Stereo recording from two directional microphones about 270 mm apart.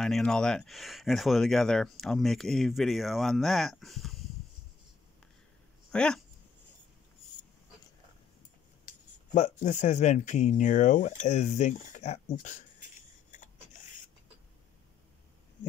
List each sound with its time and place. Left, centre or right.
0.0 s speech: centre
5.9 s speech: centre
9.3 s speech: left